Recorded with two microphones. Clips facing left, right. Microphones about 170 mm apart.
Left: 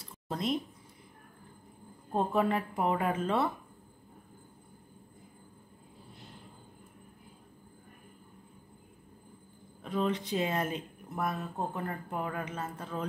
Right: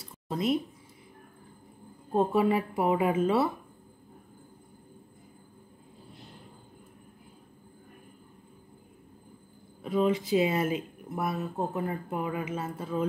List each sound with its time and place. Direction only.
0.3 s speech: 5° right (ahead or behind)
2.1 s a woman's voice: 5° right (ahead or behind)
9.8 s speech: 5° right (ahead or behind)